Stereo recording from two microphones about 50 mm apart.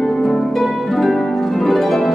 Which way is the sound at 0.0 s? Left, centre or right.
Centre.